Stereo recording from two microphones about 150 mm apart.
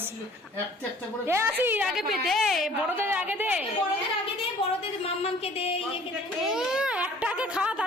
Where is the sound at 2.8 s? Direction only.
15° right (ahead or behind).